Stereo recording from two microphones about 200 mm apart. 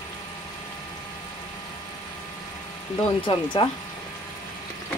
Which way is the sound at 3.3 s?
25° left (ahead or behind).